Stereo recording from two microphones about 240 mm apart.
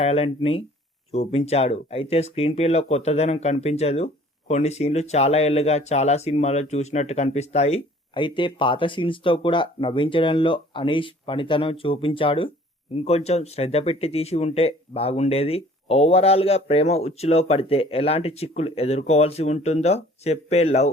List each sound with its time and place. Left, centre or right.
0.0 s speech: left